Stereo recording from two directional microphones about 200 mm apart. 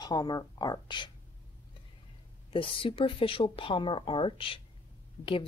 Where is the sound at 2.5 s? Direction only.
25° left (ahead or behind).